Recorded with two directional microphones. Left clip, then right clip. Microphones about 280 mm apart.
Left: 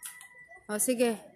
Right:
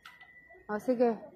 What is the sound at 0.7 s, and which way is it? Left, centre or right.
Speech, left.